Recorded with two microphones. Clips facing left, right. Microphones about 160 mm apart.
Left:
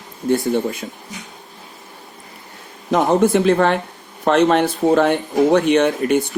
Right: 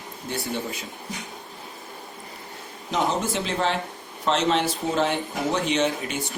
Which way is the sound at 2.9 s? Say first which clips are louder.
Left 10 dB; 60° left (ahead or behind).